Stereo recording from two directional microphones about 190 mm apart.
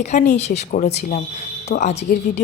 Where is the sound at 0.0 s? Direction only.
40° left (ahead or behind).